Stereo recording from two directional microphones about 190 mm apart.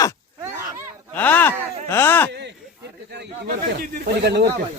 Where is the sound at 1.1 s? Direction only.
10° left (ahead or behind).